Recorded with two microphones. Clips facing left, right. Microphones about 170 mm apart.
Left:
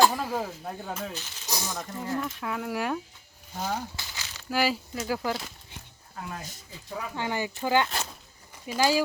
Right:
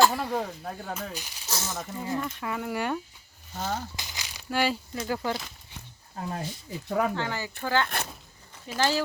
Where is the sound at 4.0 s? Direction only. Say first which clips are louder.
Even; 15° right (ahead or behind).